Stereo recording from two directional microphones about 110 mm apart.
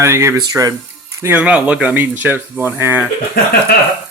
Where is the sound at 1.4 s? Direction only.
10° right (ahead or behind).